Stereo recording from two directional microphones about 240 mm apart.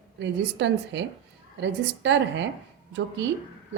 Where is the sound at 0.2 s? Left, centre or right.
Right.